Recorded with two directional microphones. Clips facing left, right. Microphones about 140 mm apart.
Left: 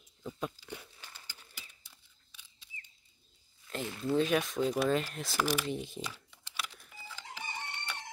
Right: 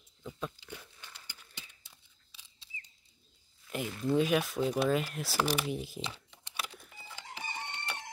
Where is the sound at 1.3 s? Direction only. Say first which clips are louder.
Right 1 dB; 25° right (ahead or behind).